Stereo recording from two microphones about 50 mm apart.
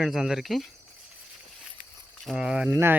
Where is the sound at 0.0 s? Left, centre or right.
Centre.